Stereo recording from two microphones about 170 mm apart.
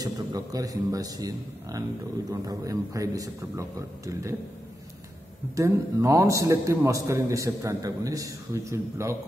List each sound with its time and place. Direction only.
0.0 s speech: 20° right (ahead or behind)
5.6 s a man's voice: 15° right (ahead or behind)